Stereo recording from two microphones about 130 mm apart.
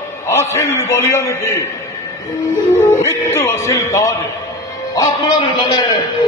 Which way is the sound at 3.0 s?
20° left (ahead or behind).